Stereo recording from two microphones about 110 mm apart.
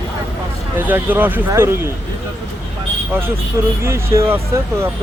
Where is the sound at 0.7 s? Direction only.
15° right (ahead or behind).